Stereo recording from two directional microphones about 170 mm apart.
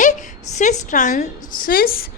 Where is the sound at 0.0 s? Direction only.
45° left (ahead or behind).